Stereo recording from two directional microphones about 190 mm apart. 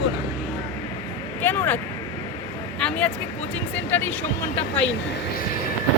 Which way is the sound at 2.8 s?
5° left (ahead or behind).